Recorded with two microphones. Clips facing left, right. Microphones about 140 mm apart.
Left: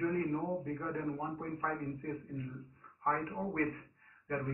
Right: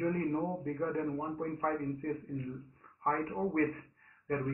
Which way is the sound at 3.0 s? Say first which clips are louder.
Right 3 dB; 40° right (ahead or behind).